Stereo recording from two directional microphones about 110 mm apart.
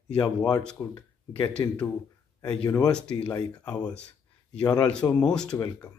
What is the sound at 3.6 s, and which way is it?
Speech, 40° left (ahead or behind).